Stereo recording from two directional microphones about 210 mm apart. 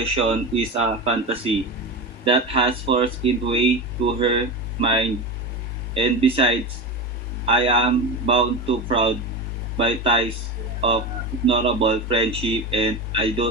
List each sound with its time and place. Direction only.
0.0 s speech: 30° right (ahead or behind)